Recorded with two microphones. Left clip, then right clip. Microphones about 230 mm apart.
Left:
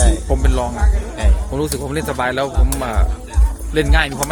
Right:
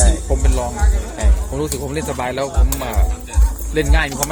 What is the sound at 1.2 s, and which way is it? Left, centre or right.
Music, left.